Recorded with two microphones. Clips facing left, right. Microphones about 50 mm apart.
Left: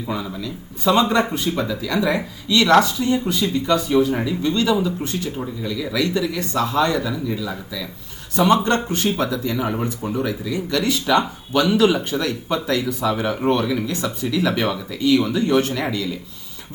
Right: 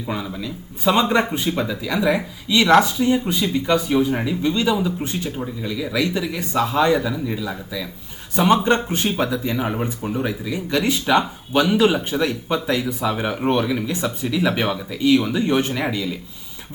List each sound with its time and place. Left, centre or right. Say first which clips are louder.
0.3 s speech: even; centre
9.7 s speech: left 1 dB; centre